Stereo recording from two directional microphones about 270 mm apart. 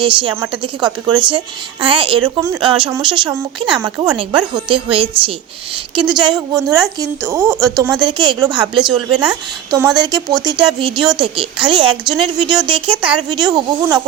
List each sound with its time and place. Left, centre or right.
0.0 s speech: centre
12.9 s speech: centre
13.3 s speech: centre